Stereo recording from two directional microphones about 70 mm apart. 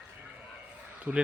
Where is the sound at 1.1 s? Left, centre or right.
Centre.